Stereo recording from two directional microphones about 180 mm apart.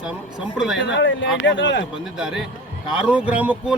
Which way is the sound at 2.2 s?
5° right (ahead or behind).